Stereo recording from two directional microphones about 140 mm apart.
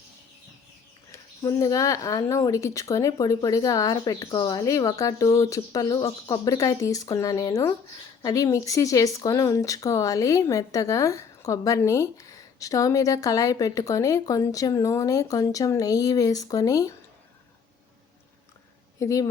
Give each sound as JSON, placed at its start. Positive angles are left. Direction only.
{"t": 1.1, "sound": "speech", "side_deg": 25}
{"t": 18.9, "sound": "speech", "side_deg": 25}